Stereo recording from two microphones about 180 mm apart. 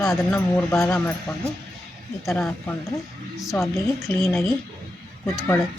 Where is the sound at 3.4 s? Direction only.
Centre (ahead or behind).